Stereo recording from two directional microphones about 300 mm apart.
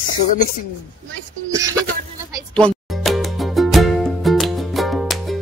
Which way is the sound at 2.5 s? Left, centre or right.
Centre.